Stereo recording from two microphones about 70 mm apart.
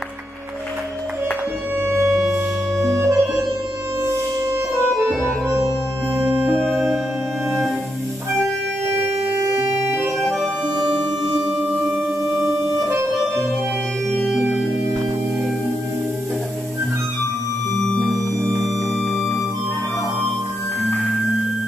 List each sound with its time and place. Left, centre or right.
1.8 s music: right
6.1 s music: right
6.6 s music: centre
9.4 s organ: right
10.0 s music: centre
12.4 s organ: right
14.3 s music: centre